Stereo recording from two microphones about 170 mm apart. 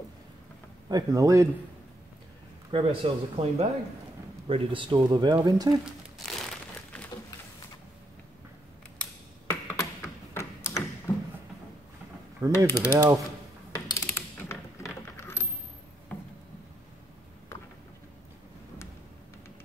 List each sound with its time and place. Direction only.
0.8 s speech: 20° right (ahead or behind)
2.7 s speech: 30° right (ahead or behind)
9.5 s tap: 15° left (ahead or behind)
11.1 s a sound: 20° left (ahead or behind)
12.4 s mechanisms: 15° left (ahead or behind)
13.7 s coin: 15° left (ahead or behind)
16.1 s a sound: 10° left (ahead or behind)